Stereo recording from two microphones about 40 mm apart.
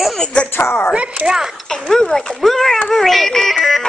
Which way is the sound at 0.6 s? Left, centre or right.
Left.